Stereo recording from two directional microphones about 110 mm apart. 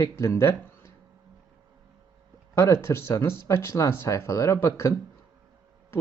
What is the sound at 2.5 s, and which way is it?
Speech, 25° left (ahead or behind).